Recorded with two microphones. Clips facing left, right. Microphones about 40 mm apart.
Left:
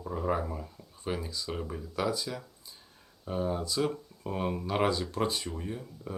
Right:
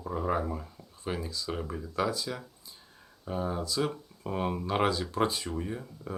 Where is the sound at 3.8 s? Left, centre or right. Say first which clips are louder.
Left 1 dB; centre.